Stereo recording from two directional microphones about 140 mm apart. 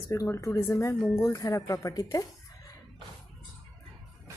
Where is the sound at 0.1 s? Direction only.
20° left (ahead or behind).